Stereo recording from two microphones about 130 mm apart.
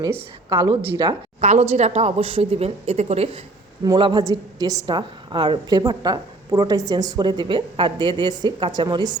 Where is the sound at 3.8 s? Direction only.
35° right (ahead or behind).